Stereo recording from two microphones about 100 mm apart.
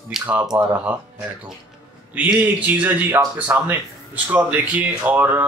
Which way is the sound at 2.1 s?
15° right (ahead or behind).